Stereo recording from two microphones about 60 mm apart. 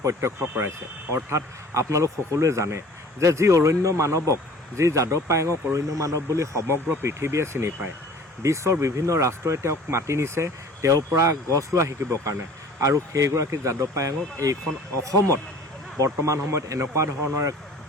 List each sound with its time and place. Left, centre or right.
0.0 s speech: right
16.0 s speech: right